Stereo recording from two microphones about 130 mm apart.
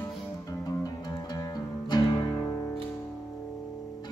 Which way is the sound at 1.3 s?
30° left (ahead or behind).